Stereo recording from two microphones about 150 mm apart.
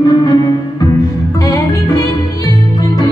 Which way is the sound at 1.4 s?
20° left (ahead or behind).